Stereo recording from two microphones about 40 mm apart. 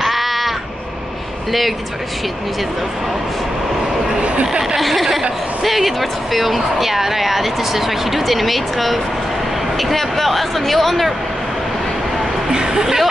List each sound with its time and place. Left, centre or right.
0.0 s crow: centre
4.6 s speech: centre
12.4 s a sound: centre
12.8 s speech: centre